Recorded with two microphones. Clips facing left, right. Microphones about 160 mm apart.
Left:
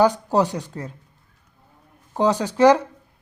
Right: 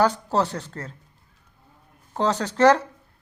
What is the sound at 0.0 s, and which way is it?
Speech, 15° left (ahead or behind).